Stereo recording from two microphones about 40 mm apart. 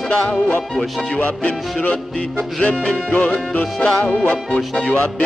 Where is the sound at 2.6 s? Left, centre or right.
Left.